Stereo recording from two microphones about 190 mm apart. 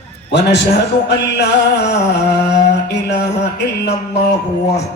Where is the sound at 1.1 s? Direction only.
65° left (ahead or behind).